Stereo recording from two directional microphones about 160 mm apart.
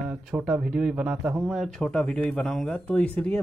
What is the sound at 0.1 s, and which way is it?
Speech, 5° right (ahead or behind).